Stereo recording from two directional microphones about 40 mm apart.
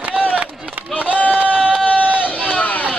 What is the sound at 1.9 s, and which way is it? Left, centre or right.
Run, right.